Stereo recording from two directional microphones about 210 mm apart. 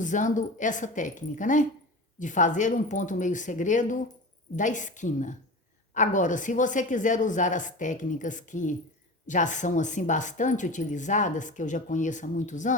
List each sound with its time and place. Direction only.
0.0 s speech: 35° left (ahead or behind)